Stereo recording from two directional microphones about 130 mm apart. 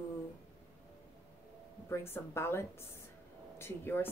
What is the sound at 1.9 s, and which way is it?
Speech, 20° left (ahead or behind).